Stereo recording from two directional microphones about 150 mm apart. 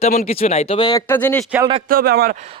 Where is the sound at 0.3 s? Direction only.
45° left (ahead or behind).